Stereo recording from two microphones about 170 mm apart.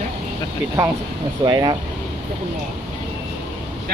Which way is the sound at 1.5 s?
25° right (ahead or behind).